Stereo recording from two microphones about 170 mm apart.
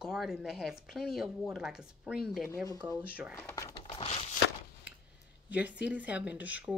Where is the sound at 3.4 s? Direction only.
15° left (ahead or behind).